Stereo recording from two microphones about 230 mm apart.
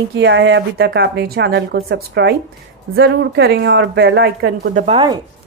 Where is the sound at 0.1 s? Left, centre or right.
Right.